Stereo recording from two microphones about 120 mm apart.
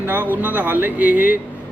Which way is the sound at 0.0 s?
15° right (ahead or behind).